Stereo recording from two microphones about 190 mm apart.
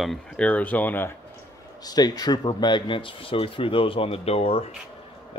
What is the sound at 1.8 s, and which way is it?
Speech, 20° left (ahead or behind).